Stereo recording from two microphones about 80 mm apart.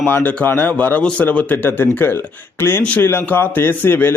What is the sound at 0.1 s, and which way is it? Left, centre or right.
A man's voice, left.